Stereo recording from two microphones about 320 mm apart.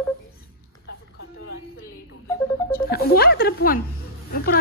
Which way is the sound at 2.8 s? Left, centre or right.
Left.